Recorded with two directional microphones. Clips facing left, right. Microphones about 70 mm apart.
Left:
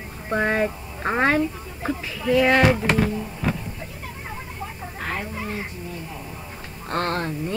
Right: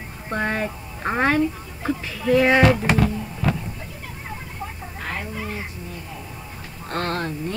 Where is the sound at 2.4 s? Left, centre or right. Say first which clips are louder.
Right 1 dB; centre.